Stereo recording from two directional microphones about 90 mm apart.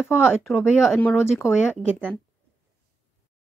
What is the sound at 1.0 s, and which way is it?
Speech, 20° left (ahead or behind).